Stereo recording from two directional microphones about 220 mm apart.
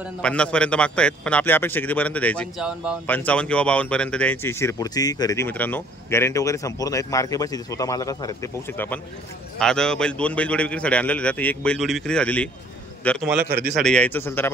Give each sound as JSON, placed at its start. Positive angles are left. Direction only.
{"t": 0.2, "sound": "a man's voice", "side_deg": 5}
{"t": 13.4, "sound": "a man's voice", "side_deg": -45}
{"t": 13.7, "sound": "speech", "side_deg": 5}